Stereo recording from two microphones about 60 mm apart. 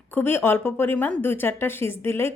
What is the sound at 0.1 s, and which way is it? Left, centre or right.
A woman's voice, left.